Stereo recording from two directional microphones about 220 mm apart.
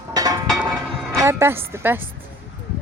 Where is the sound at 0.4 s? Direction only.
Centre (ahead or behind).